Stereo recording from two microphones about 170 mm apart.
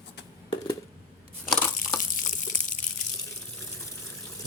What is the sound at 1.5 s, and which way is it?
Crushing, 5° left (ahead or behind).